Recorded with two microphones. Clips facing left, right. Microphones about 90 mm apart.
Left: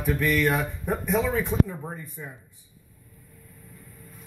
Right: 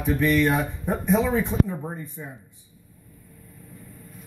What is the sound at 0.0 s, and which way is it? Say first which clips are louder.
Speech: right 3 dB; 20° right (ahead or behind).